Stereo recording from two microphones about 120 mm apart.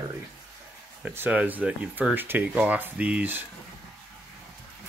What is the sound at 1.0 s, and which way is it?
Speech, 15° right (ahead or behind).